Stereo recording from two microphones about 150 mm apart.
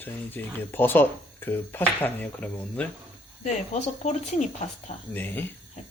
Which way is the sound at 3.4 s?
50° left (ahead or behind).